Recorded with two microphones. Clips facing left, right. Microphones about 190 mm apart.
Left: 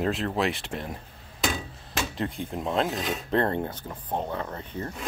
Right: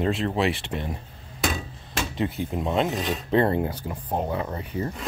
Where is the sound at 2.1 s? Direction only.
5° right (ahead or behind).